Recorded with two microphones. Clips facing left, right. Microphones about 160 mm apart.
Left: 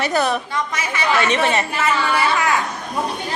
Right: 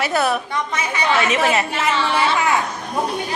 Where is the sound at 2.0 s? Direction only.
25° right (ahead or behind).